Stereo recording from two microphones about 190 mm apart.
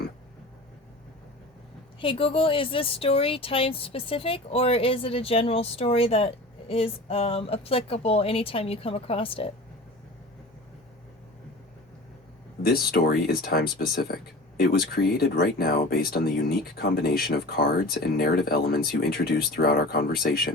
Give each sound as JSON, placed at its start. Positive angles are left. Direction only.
{"t": 2.0, "sound": "speech", "side_deg": 30}
{"t": 12.6, "sound": "speech", "side_deg": 55}